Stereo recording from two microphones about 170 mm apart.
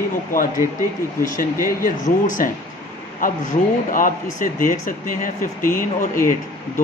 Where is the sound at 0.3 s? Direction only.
55° left (ahead or behind).